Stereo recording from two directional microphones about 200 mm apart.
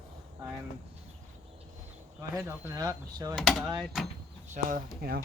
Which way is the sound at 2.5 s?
15° right (ahead or behind).